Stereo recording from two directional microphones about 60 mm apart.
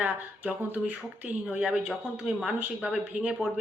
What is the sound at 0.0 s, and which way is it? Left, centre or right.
A woman's voice, right.